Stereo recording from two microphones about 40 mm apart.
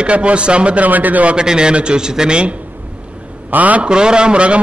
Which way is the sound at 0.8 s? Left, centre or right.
Right.